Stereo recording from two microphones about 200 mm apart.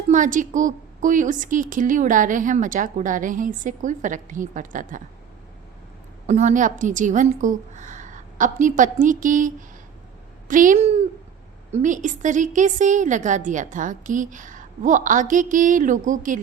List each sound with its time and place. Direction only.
0.1 s a woman's voice: 40° right (ahead or behind)
6.2 s a woman's voice: 35° right (ahead or behind)